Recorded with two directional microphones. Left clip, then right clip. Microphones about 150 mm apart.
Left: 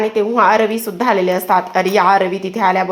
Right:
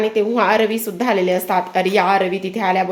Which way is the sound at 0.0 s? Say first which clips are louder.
Left 3 dB; 5° right (ahead or behind).